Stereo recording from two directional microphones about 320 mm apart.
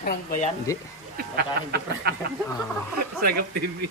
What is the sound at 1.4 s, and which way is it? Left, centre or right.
Speech, right.